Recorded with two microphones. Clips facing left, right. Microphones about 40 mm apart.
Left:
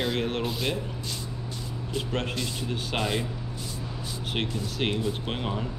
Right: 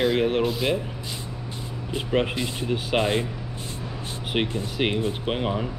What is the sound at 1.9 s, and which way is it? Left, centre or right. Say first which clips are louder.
Speech: right 6 dB; centre.